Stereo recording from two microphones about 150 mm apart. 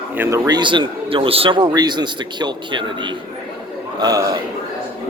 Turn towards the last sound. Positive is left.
turn(degrees=-25)  # may be behind; listen again after turning